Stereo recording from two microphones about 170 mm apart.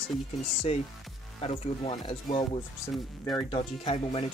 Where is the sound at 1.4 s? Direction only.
30° left (ahead or behind).